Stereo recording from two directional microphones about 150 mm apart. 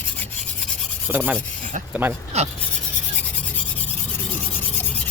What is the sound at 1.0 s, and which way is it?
Rub, 10° right (ahead or behind).